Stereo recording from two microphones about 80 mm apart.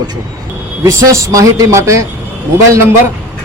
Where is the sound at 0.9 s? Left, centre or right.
Right.